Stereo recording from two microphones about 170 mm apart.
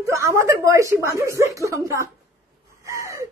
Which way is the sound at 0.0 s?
15° right (ahead or behind).